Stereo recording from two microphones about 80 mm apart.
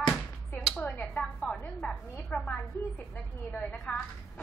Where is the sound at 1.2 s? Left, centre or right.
Centre.